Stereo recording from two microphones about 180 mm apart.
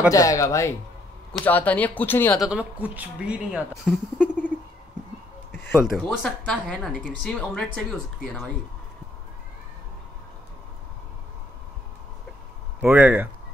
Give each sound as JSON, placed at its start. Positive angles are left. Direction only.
{"t": 0.1, "sound": "speech", "side_deg": 20}
{"t": 2.4, "sound": "speech", "side_deg": -5}
{"t": 5.7, "sound": "a woman's voice", "side_deg": 0}
{"t": 12.8, "sound": "speech", "side_deg": -10}